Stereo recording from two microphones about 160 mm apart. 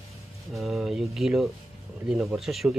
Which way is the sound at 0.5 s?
Centre (ahead or behind).